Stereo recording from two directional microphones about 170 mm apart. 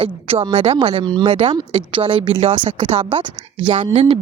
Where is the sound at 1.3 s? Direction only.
40° right (ahead or behind).